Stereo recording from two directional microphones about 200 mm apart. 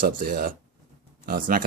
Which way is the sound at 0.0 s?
50° right (ahead or behind).